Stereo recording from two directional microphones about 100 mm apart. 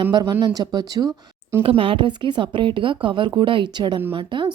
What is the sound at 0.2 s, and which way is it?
Speech, 40° right (ahead or behind).